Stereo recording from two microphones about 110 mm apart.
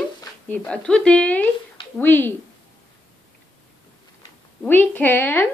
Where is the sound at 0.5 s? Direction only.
10° left (ahead or behind).